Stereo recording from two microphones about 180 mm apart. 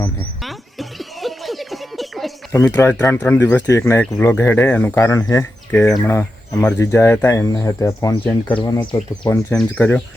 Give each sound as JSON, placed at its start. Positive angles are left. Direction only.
{"t": 0.0, "sound": "a sound", "side_deg": 5}
{"t": 2.5, "sound": "speech", "side_deg": 15}
{"t": 5.7, "sound": "speech", "side_deg": 5}
{"t": 8.6, "sound": "speech", "side_deg": 20}
{"t": 9.3, "sound": "speech", "side_deg": 5}